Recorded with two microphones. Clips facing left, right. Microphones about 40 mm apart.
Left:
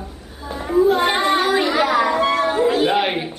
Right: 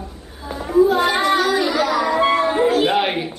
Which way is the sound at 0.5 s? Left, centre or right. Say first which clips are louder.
Right 1 dB; centre.